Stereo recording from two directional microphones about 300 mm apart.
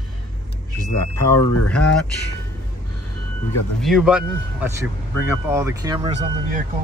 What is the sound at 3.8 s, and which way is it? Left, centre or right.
Speech, centre.